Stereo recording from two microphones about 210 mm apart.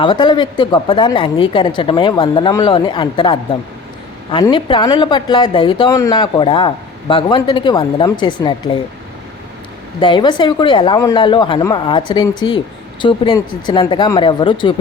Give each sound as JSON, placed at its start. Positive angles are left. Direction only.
{"t": 0.0, "sound": "speech", "side_deg": 20}
{"t": 10.0, "sound": "speech", "side_deg": 20}